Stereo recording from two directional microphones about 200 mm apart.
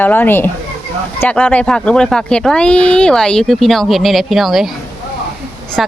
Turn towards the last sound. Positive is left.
turn(degrees=0)  # may be behind; listen again after turning